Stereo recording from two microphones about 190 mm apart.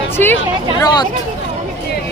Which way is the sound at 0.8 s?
20° left (ahead or behind).